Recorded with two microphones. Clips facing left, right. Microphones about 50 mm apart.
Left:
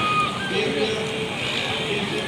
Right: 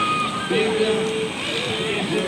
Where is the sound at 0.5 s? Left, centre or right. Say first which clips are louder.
Right 6 dB; centre.